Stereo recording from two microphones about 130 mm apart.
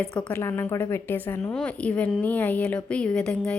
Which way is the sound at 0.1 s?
10° left (ahead or behind).